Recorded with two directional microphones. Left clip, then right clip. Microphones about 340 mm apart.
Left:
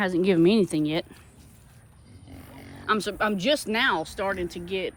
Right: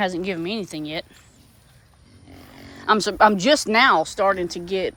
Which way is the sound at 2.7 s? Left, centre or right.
Centre.